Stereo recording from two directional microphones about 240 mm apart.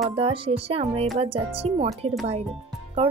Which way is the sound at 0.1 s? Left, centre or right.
Right.